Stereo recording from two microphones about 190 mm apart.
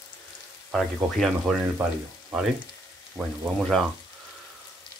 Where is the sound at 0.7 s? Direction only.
Centre (ahead or behind).